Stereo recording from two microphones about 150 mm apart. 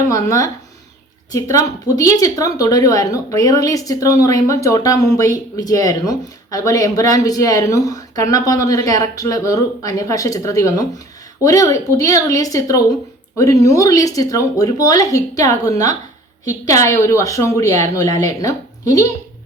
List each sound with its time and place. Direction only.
0.1 s speech: 20° left (ahead or behind)